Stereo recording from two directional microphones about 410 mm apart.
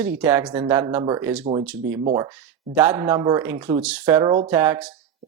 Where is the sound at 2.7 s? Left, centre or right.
Centre.